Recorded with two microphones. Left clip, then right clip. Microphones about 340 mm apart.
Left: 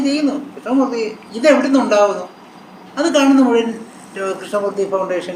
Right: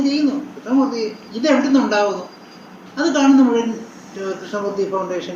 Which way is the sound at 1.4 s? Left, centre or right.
Left.